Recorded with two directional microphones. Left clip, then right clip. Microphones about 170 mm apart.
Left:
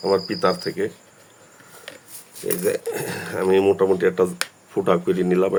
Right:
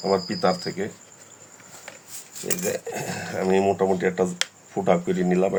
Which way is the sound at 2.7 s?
35° left (ahead or behind).